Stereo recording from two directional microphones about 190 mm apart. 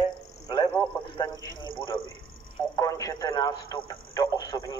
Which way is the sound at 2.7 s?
15° left (ahead or behind).